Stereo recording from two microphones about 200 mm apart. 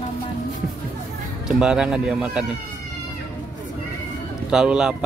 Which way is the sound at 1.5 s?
5° right (ahead or behind).